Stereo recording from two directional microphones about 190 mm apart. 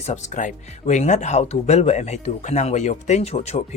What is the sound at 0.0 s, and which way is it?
Speech, 40° left (ahead or behind).